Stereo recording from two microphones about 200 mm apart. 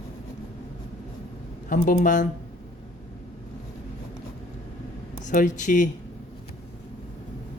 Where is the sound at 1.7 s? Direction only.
40° left (ahead or behind).